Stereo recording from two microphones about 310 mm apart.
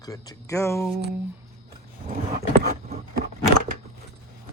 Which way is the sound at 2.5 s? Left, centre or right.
Right.